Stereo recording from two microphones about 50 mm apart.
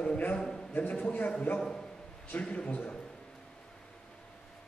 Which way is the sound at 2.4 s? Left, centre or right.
Left.